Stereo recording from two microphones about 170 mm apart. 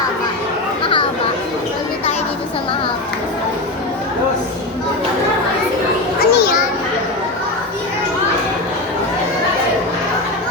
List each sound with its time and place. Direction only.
0.8 s chatter: 30° left (ahead or behind)
6.1 s children playing: 65° left (ahead or behind)